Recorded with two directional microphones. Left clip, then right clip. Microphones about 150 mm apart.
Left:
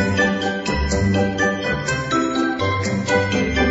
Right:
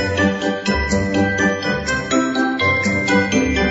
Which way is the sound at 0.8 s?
Centre (ahead or behind).